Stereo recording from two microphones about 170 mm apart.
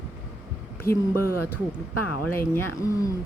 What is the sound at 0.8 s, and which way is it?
Speech, 60° left (ahead or behind).